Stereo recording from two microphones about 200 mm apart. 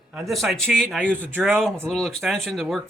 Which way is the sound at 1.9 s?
Centre (ahead or behind).